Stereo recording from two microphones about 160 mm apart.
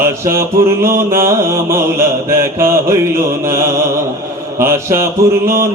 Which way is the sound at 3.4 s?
15° right (ahead or behind).